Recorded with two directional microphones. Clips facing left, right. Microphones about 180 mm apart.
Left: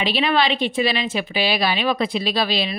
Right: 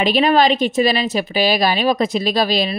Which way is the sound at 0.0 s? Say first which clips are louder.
Right 6 dB; 45° right (ahead or behind).